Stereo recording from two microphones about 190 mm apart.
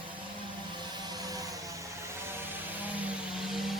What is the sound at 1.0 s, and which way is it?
Vehicle, 20° right (ahead or behind).